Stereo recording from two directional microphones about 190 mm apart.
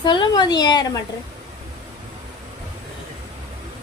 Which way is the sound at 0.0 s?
25° left (ahead or behind).